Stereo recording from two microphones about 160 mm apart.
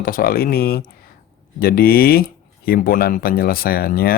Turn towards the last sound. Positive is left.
turn(degrees=70)  # may be behind; listen again after turning